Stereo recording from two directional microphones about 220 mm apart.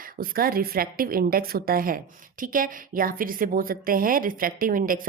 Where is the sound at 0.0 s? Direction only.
40° right (ahead or behind).